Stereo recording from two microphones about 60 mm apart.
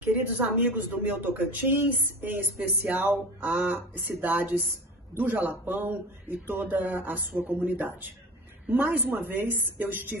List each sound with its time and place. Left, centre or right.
0.0 s a woman's voice: right